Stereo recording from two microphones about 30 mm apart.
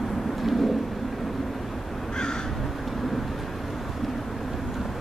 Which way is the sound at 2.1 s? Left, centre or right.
Left.